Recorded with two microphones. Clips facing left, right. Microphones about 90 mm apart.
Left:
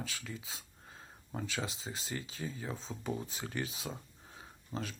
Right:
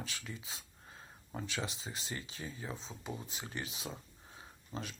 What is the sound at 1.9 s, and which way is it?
Speech, 35° left (ahead or behind).